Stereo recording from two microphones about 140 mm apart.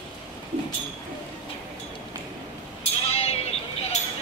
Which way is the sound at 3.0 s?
45° left (ahead or behind).